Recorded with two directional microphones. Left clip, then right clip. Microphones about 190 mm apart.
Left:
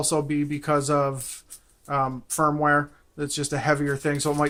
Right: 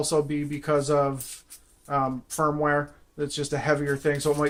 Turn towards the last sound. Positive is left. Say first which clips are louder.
# right 1 dB
turn(degrees=40)  # may be behind; listen again after turning